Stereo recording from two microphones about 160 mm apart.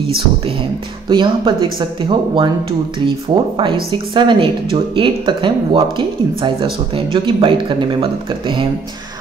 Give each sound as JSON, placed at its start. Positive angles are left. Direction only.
{"t": 1.0, "sound": "a woman's voice", "side_deg": -30}